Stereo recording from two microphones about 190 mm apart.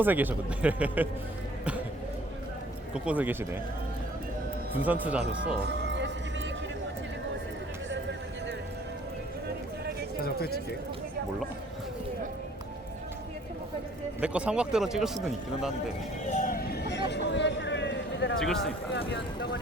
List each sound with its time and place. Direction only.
0.0 s speech: 10° right (ahead or behind)
2.9 s speech: 5° right (ahead or behind)
4.7 s speech: 10° right (ahead or behind)
5.6 s music: 65° right (ahead or behind)
10.2 s speech: 55° left (ahead or behind)
14.2 s speech: 5° right (ahead or behind)
16.2 s vehicle: 40° left (ahead or behind); by 17.0 s 60° left (ahead or behind)
17.1 s a sound: 65° left (ahead or behind)
18.3 s speech: centre (ahead or behind)
18.9 s speech: 65° left (ahead or behind)